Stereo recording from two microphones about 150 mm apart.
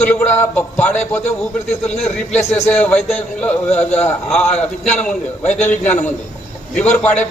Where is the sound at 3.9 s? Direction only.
5° left (ahead or behind).